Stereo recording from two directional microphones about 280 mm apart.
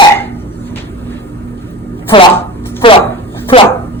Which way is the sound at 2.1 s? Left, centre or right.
Centre.